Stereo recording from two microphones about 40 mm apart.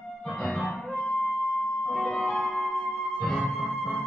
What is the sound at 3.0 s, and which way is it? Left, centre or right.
Music, centre.